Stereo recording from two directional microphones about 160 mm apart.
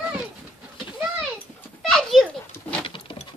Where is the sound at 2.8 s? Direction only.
35° left (ahead or behind).